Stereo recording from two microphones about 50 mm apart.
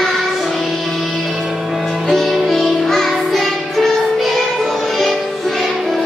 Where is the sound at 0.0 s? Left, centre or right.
Centre.